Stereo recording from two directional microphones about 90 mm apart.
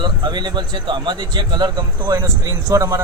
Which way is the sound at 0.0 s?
55° right (ahead or behind).